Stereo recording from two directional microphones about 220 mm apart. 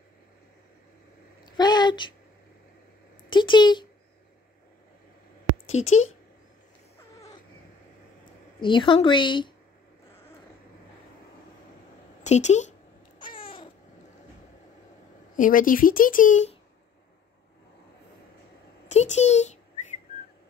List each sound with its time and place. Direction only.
1.4 s a sound: 20° left (ahead or behind)
3.3 s speech: 20° left (ahead or behind)
5.8 s a woman's voice: 30° left (ahead or behind)
8.5 s a woman's voice: 20° left (ahead or behind)
12.2 s a woman's voice: 30° left (ahead or behind)
13.2 s babbling: 25° left (ahead or behind)
15.3 s speech: 40° left (ahead or behind)
18.9 s a child's voice: 30° left (ahead or behind)